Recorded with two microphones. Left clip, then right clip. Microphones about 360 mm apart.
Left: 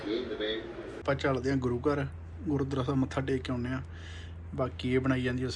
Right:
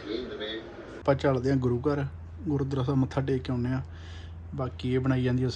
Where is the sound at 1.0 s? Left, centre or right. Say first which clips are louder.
Right 4 dB; centre.